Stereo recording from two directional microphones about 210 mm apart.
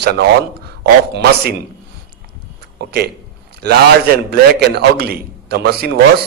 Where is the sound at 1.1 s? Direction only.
50° right (ahead or behind).